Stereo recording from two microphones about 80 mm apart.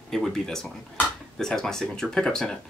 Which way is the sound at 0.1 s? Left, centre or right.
Centre.